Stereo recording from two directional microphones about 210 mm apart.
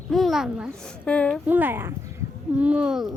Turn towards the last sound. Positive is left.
turn(degrees=-5)  # may be behind; listen again after turning